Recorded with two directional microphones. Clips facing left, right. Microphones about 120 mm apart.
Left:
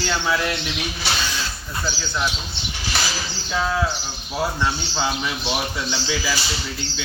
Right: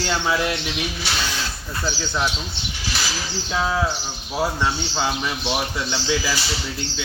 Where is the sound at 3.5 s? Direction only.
10° right (ahead or behind).